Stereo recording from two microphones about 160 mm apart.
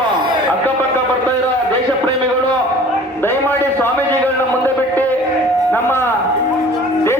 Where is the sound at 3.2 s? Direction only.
15° left (ahead or behind).